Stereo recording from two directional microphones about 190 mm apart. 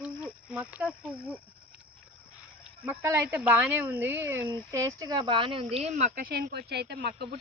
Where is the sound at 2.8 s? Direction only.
10° right (ahead or behind).